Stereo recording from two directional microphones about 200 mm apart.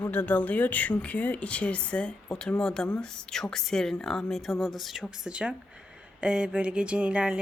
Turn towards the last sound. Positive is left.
turn(degrees=-5)  # may be behind; listen again after turning